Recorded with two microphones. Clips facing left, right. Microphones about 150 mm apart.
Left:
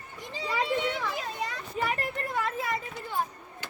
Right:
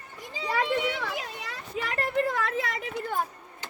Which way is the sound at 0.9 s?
75° right (ahead or behind).